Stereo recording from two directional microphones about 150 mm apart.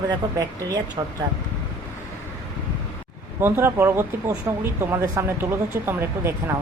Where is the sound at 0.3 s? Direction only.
25° right (ahead or behind).